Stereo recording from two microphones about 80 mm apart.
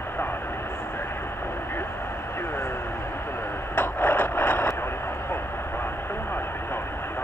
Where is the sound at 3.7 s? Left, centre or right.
Left.